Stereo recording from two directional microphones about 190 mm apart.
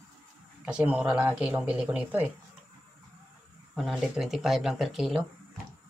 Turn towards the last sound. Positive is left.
turn(degrees=0)  # may be behind; listen again after turning